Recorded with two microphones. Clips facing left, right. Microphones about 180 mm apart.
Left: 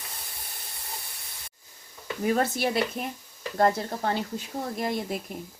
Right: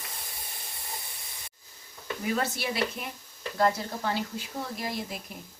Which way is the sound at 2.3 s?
50° left (ahead or behind).